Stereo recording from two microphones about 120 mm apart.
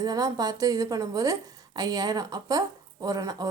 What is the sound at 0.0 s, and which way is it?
A woman's voice, 30° right (ahead or behind).